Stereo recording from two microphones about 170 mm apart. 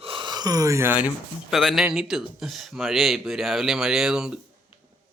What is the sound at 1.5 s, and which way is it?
Speech, centre (ahead or behind).